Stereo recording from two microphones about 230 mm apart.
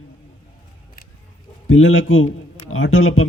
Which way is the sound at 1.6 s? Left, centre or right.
Left.